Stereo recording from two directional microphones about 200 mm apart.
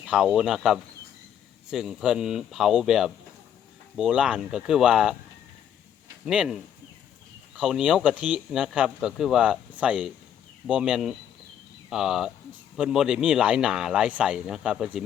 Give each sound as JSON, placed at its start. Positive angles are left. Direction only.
{"t": 0.0, "sound": "speech", "side_deg": -5}
{"t": 6.2, "sound": "speech", "side_deg": -5}